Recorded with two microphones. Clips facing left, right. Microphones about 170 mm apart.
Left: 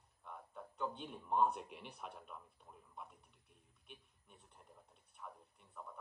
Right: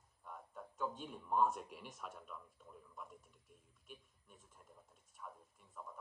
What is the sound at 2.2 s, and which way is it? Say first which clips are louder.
Speech: right 1 dB; 50° left (ahead or behind).